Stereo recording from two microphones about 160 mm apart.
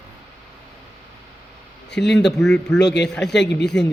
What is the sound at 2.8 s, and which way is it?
Speech, 90° left.